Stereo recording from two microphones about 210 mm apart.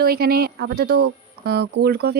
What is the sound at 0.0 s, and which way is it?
Speech, 45° right (ahead or behind).